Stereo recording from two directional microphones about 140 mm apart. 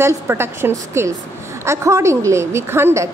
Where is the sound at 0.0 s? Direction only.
15° right (ahead or behind).